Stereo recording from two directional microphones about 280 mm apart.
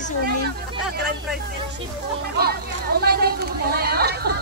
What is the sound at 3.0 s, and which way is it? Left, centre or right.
Speech, right.